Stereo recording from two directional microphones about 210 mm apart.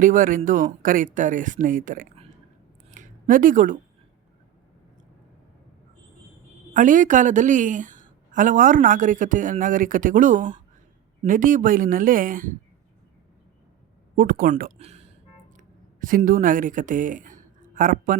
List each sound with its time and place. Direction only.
0.0 s a woman's voice: 40° right (ahead or behind)
2.9 s a sound: 40° right (ahead or behind)
6.7 s a woman's voice: 40° right (ahead or behind)
14.2 s speech: 40° right (ahead or behind)
15.5 s speech: 40° right (ahead or behind)